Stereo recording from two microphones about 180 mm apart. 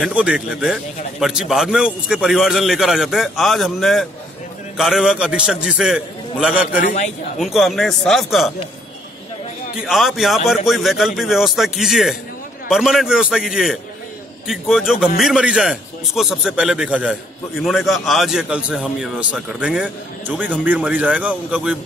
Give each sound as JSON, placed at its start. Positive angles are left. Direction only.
{"t": 0.0, "sound": "a man's voice", "side_deg": -5}
{"t": 6.8, "sound": "speech", "side_deg": 45}
{"t": 7.3, "sound": "a man's voice", "side_deg": 0}
{"t": 9.8, "sound": "a man's voice", "side_deg": 0}